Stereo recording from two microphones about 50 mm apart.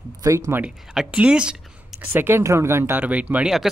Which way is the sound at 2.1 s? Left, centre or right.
Right.